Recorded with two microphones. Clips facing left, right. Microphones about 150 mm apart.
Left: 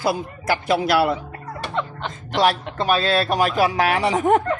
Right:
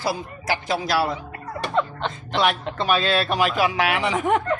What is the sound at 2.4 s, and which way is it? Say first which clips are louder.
Speech: left 3 dB; 40° left (ahead or behind).